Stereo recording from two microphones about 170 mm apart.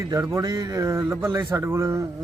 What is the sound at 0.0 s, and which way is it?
Speech, 20° right (ahead or behind).